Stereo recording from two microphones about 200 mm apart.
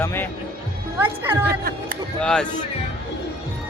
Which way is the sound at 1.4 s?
50° right (ahead or behind).